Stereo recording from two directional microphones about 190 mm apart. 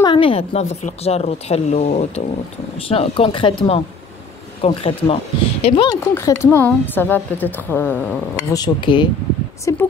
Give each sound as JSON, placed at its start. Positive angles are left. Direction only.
{"t": 0.0, "sound": "a woman's voice", "side_deg": 25}
{"t": 6.1, "sound": "a woman's voice", "side_deg": 15}